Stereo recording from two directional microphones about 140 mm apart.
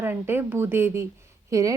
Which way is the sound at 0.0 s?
15° right (ahead or behind).